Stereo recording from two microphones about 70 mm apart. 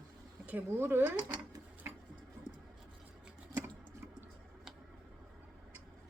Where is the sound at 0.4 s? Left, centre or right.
Right.